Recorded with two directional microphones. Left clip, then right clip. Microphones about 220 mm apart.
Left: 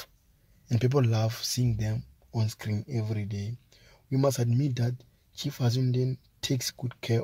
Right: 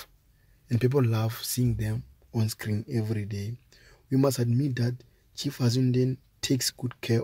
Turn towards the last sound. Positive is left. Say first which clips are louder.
# right 2 dB
turn(degrees=0)  # may be behind; listen again after turning